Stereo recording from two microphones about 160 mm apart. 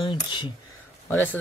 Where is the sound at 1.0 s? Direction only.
10° left (ahead or behind).